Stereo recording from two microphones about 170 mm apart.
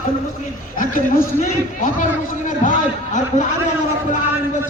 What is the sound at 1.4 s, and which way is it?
A man's voice, 50° left (ahead or behind).